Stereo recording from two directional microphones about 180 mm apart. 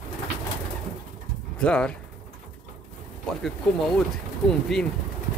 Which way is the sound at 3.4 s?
5° left (ahead or behind).